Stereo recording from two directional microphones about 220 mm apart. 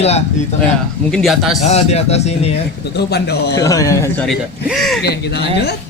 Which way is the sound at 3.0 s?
50° left (ahead or behind).